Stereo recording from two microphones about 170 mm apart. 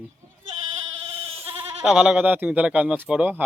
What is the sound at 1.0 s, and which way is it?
Goat, 35° right (ahead or behind).